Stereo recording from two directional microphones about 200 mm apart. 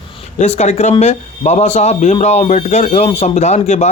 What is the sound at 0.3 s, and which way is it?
Speech, 35° left (ahead or behind).